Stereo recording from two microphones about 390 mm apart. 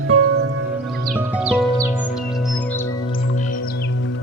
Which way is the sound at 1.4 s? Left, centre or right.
Centre.